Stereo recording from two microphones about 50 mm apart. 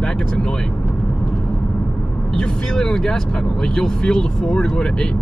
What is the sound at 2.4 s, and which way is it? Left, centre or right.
Speech, centre.